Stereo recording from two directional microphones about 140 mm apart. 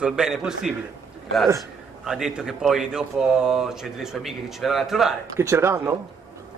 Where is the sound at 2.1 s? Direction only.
5° right (ahead or behind).